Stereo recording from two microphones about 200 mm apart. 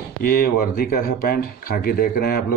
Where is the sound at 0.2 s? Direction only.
50° left (ahead or behind).